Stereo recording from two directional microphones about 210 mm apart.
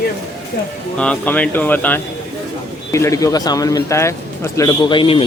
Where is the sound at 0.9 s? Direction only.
5° left (ahead or behind); by 5.2 s 25° left (ahead or behind).